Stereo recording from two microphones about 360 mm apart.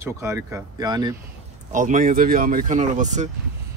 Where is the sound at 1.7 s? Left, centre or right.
Right.